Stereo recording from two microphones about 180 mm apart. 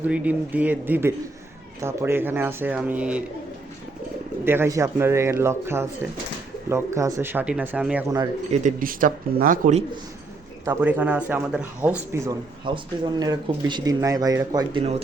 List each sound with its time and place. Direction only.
0.1 s speech: 10° right (ahead or behind)
4.4 s speech: 15° right (ahead or behind)
8.5 s speech: 45° right (ahead or behind)
10.7 s speech: 10° right (ahead or behind); by 15.0 s 30° right (ahead or behind)